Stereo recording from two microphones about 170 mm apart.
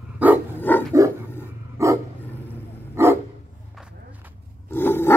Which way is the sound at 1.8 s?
15° right (ahead or behind).